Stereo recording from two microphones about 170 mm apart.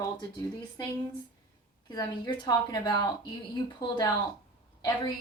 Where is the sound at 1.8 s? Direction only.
25° left (ahead or behind).